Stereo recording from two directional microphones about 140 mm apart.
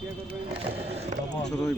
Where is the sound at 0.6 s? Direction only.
45° right (ahead or behind).